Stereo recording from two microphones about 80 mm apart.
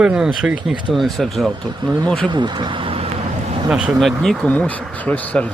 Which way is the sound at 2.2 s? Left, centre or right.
Right.